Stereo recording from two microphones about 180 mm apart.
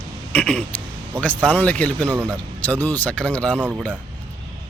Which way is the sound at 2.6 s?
10° left (ahead or behind).